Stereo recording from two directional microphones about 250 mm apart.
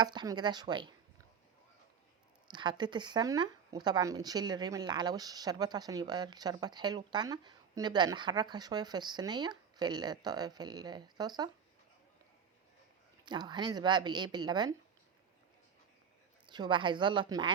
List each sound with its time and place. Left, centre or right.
0.0 s speech: centre
2.5 s speech: centre
13.2 s speech: centre
16.5 s a woman's voice: centre